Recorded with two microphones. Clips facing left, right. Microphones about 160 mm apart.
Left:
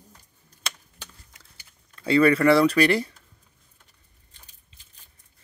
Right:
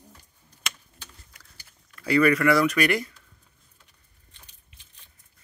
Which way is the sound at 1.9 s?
25° left (ahead or behind).